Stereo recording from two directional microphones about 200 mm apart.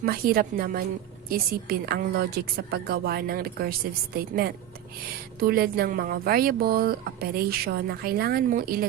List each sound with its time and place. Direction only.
0.0 s speech: 45° right (ahead or behind)